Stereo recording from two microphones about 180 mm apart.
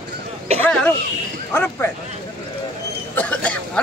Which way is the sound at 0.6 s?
5° left (ahead or behind).